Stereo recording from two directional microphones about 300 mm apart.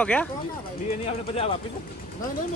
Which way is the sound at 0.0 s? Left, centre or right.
Centre.